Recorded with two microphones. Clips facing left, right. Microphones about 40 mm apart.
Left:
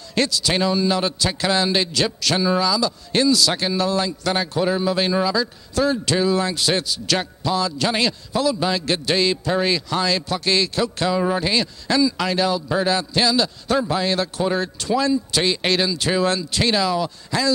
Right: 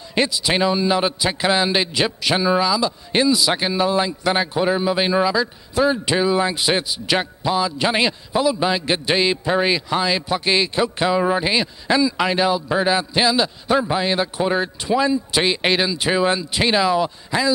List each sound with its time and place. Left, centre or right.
0.1 s a man's voice: centre